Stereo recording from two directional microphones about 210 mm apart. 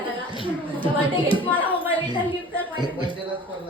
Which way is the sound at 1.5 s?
10° left (ahead or behind).